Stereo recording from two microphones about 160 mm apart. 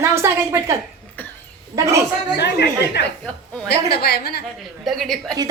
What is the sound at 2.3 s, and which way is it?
Speech, 90° left.